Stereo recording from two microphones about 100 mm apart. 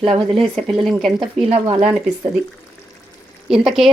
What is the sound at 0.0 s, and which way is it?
Speech, 55° right (ahead or behind).